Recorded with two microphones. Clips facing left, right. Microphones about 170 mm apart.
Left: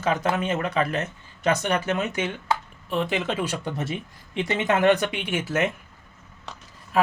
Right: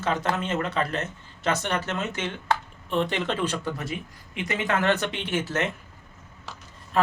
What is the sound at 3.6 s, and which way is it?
Speech, 25° left (ahead or behind).